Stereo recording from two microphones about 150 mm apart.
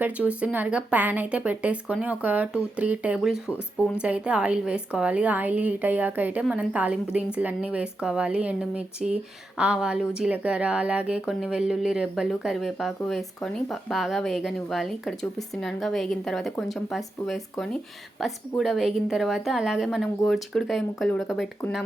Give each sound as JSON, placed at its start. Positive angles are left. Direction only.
{"t": 0.0, "sound": "a woman's voice", "side_deg": -10}